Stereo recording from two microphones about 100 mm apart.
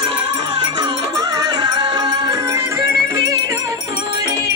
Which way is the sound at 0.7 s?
40° right (ahead or behind).